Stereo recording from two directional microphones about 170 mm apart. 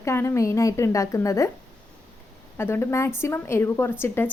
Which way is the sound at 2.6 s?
15° left (ahead or behind).